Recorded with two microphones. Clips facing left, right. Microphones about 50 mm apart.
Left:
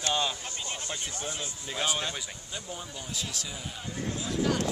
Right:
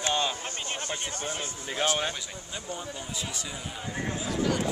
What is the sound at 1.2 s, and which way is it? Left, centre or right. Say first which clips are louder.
Speech: right 2 dB; right.